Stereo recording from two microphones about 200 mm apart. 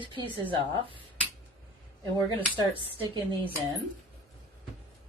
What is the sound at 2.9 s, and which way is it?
Speech, 25° right (ahead or behind).